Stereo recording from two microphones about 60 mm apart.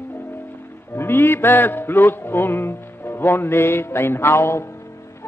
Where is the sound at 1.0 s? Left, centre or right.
Left.